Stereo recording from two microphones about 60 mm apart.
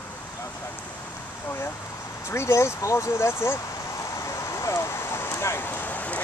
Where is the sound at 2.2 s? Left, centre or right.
Left.